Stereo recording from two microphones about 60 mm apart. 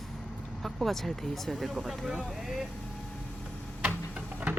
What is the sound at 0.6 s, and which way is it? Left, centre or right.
Speech, centre.